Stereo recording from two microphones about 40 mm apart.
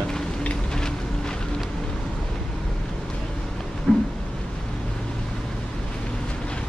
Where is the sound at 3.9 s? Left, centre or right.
Left.